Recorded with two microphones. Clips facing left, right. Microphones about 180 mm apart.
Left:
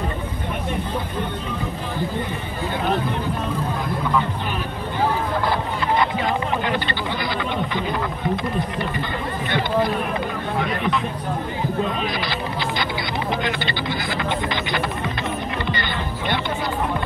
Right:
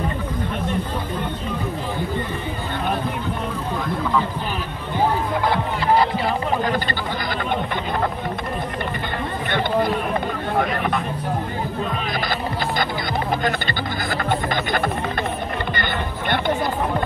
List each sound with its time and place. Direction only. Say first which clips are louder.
5.9 s a sound: right 1 dB; 35° right (ahead or behind)
7.7 s speech: right 1 dB; 50° right (ahead or behind)
10.6 s speech: even; 50° right (ahead or behind)
13.3 s speech: even; 45° right (ahead or behind)
15.7 s music: right 1 dB; 50° right (ahead or behind)